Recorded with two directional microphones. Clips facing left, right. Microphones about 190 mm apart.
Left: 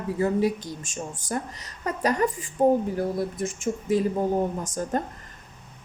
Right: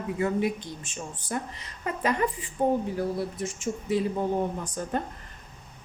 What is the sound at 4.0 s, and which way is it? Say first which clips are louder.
Speech: left 2 dB; 45° left (ahead or behind).